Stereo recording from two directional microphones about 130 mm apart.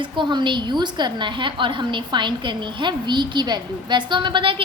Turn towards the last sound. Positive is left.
turn(degrees=-40)  # may be behind; listen again after turning